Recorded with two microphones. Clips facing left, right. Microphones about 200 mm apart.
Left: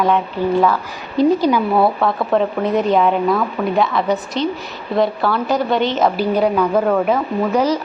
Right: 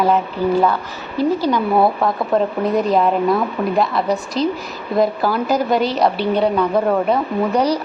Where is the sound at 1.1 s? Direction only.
15° left (ahead or behind).